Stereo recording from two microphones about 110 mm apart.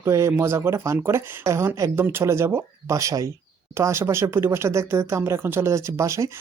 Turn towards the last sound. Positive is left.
turn(degrees=-30)  # may be behind; listen again after turning